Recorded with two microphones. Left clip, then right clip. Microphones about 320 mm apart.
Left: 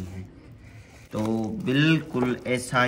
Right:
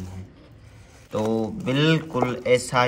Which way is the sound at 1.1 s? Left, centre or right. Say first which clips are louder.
Right 4 dB; centre.